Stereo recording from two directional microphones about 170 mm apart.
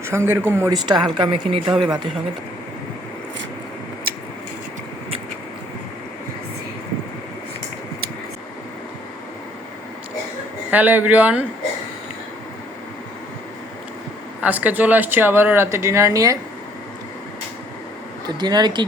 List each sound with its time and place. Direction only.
0.0 s speech: 15° right (ahead or behind)
1.7 s speech: centre (ahead or behind)
10.7 s speech: 10° right (ahead or behind)
14.4 s speech: 10° right (ahead or behind)
18.3 s speech: 25° right (ahead or behind)